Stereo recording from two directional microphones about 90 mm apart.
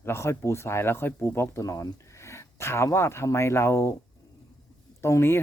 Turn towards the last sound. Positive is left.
turn(degrees=30)  # may be behind; listen again after turning